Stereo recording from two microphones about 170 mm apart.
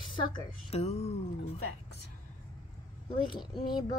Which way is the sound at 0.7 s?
40° left (ahead or behind).